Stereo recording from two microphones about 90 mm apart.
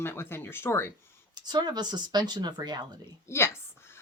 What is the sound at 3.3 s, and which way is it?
Speech, 30° left (ahead or behind).